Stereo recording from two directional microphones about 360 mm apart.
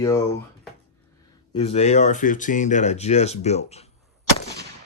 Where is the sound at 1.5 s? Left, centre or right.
Centre.